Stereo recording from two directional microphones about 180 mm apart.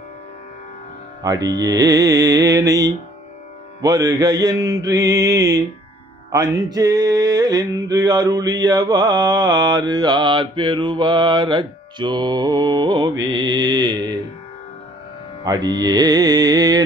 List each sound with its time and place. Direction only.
1.2 s music: 20° right (ahead or behind)
15.4 s music: 20° right (ahead or behind)